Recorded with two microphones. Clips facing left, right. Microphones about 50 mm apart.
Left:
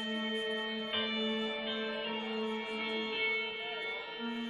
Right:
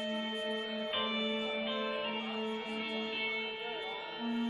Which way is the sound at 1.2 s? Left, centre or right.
Left.